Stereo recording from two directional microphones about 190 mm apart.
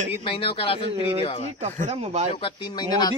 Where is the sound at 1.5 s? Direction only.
35° right (ahead or behind).